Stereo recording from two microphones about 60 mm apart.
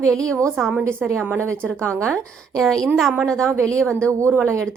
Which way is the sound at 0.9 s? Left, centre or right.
Right.